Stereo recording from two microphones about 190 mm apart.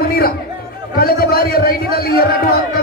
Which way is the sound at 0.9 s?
50° left (ahead or behind).